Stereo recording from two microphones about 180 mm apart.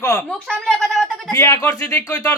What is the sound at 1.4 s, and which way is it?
Speech, 15° left (ahead or behind).